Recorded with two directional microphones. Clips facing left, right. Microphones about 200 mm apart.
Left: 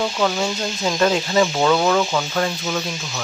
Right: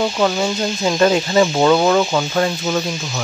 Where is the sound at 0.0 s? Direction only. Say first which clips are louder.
Right 3 dB; 10° right (ahead or behind).